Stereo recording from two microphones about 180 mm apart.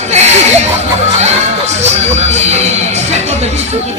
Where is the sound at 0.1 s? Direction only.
40° right (ahead or behind).